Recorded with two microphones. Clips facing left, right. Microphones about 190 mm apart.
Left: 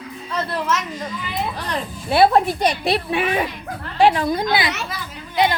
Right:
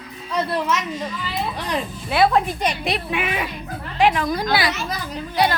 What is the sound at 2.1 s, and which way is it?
A woman's voice, 30° left (ahead or behind).